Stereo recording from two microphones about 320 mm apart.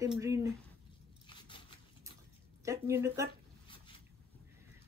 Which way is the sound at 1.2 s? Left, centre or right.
Centre.